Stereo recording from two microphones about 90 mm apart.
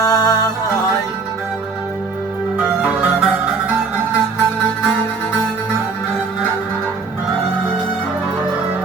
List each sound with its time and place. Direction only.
0.0 s music: 40° left (ahead or behind)
2.6 s music: 5° right (ahead or behind)